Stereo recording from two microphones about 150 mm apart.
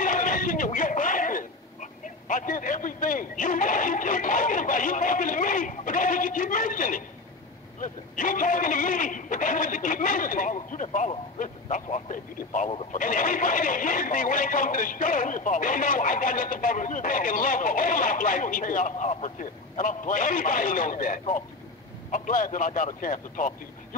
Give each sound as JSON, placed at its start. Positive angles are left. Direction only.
{"t": 0.0, "sound": "a man's voice", "side_deg": 60}